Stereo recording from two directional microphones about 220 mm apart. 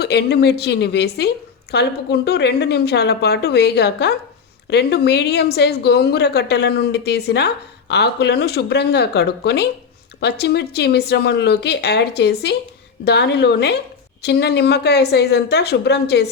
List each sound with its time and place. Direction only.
0.0 s a woman's voice: 50° left (ahead or behind)